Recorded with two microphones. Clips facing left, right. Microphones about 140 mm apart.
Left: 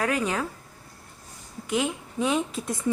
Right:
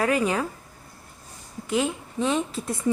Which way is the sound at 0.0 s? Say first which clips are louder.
Right 3 dB; 5° right (ahead or behind).